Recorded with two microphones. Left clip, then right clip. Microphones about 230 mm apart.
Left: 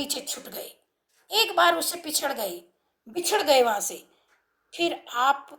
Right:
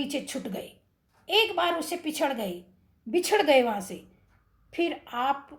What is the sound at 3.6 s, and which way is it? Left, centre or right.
A woman's voice, left.